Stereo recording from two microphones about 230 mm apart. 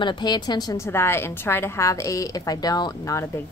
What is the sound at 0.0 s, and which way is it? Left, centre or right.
A woman's voice, centre.